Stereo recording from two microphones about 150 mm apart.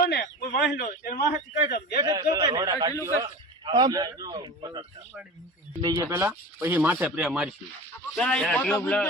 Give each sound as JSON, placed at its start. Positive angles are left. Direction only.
{"t": 0.0, "sound": "a man's voice", "side_deg": 90}
{"t": 2.0, "sound": "a man's voice", "side_deg": -25}
{"t": 5.8, "sound": "speech", "side_deg": -20}
{"t": 8.1, "sound": "a man's voice", "side_deg": 5}